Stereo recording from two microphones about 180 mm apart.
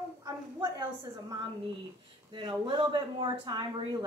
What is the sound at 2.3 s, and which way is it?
Speech, 30° right (ahead or behind).